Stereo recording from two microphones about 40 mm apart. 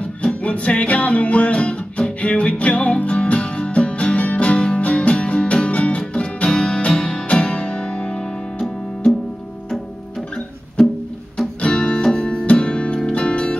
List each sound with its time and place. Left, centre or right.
0.2 s music: left
11.6 s music: left